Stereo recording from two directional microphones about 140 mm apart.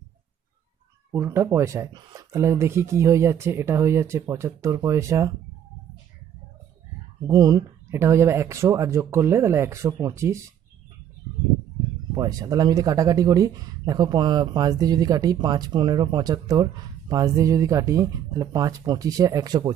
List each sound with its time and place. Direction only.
1.1 s speech: 15° right (ahead or behind)
7.2 s speech: 25° right (ahead or behind)
12.1 s speech: 25° right (ahead or behind)